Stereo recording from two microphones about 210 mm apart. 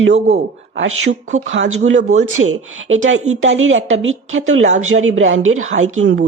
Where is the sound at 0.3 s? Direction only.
65° right (ahead or behind).